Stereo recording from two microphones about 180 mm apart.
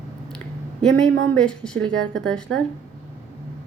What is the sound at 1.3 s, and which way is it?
A woman's voice, 5° left (ahead or behind).